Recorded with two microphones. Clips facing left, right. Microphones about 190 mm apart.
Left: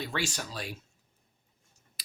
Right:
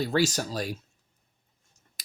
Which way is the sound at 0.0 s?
40° right (ahead or behind).